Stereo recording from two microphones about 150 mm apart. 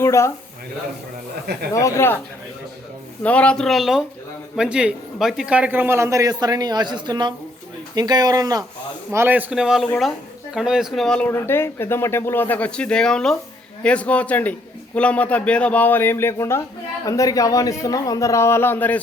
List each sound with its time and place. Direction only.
0.0 s speech: 20° left (ahead or behind)
1.7 s speech: 20° left (ahead or behind)
3.2 s a man's voice: 10° left (ahead or behind); by 8.6 s 25° right (ahead or behind)
9.1 s a man's voice: 15° right (ahead or behind); by 18.9 s 15° left (ahead or behind)